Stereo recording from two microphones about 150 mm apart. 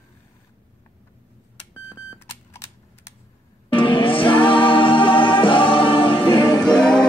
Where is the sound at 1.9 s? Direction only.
15° left (ahead or behind).